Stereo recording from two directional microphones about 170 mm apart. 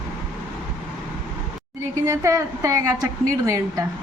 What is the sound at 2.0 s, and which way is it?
A woman's voice, 15° right (ahead or behind).